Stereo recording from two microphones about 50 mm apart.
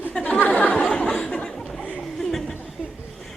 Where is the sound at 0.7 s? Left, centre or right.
Centre.